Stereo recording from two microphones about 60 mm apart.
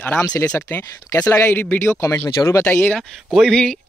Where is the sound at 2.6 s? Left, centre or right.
Left.